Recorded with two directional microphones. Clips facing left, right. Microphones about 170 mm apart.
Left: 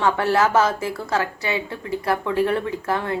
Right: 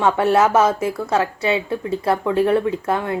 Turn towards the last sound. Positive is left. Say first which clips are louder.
# right 3 dB
turn(degrees=-25)  # may be behind; listen again after turning